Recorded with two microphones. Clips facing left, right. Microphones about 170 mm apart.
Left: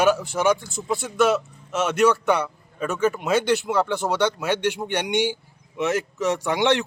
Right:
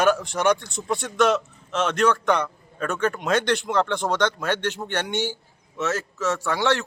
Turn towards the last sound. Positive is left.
turn(degrees=20)  # may be behind; listen again after turning